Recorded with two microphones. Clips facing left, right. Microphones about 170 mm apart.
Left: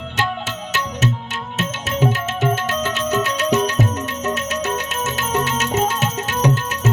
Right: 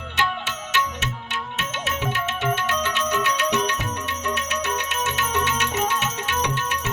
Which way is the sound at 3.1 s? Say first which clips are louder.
Left 6 dB; 40° left (ahead or behind).